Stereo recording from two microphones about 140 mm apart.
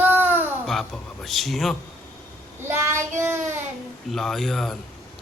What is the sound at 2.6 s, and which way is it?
Speech, 20° right (ahead or behind).